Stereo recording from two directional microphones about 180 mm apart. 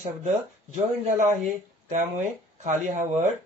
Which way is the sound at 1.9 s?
45° right (ahead or behind).